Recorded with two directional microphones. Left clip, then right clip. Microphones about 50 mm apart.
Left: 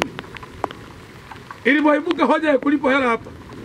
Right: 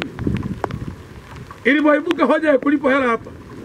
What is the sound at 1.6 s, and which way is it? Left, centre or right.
A man's voice, centre.